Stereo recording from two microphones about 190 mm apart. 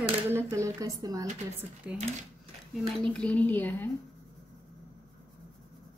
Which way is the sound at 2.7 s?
5° left (ahead or behind).